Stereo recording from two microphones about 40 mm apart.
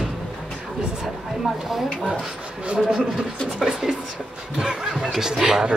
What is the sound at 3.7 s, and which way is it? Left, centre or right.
Speech, centre.